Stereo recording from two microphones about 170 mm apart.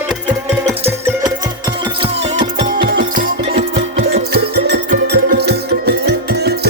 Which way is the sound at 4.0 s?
70° right (ahead or behind).